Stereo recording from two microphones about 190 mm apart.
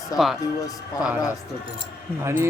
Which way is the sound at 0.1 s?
20° left (ahead or behind).